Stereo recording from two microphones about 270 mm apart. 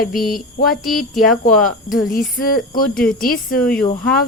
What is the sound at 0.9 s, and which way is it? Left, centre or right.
Speech, centre.